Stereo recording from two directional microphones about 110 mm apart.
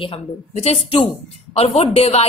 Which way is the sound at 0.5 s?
70° left (ahead or behind).